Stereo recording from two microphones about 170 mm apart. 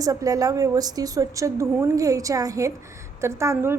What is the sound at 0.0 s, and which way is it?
A woman's voice, 20° right (ahead or behind).